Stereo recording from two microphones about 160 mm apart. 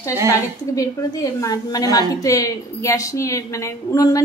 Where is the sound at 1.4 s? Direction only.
20° left (ahead or behind).